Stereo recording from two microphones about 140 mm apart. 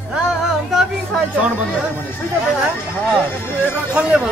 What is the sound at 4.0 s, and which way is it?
Speech, 5° right (ahead or behind).